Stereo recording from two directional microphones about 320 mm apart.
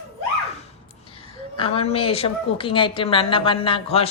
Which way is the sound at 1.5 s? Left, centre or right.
Centre.